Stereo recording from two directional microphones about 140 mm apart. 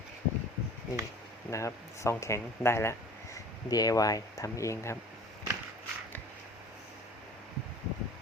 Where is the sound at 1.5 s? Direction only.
20° left (ahead or behind).